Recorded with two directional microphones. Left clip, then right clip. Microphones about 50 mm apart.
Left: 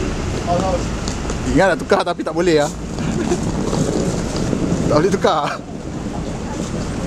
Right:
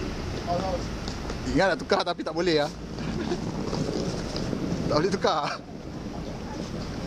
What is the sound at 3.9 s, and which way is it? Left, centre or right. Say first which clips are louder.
Boat: left 10 dB; right.